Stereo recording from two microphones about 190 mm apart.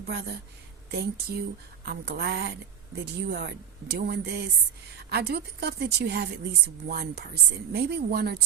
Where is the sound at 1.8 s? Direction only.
60° right (ahead or behind).